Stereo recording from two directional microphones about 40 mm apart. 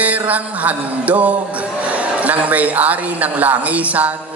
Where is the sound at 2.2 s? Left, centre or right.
Right.